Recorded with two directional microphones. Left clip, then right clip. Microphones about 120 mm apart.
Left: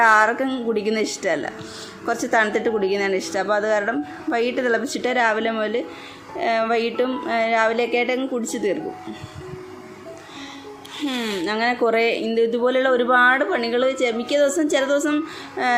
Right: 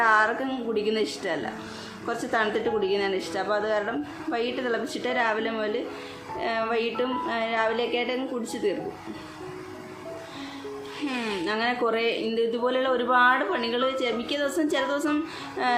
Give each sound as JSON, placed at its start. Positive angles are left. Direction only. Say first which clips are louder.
{"t": 0.0, "sound": "a woman's voice", "louder": "left 6 dB", "side_deg": 55}
{"t": 11.0, "sound": "speech", "louder": "left 5 dB", "side_deg": 35}
{"t": 11.4, "sound": "speech", "louder": "left 6 dB", "side_deg": 50}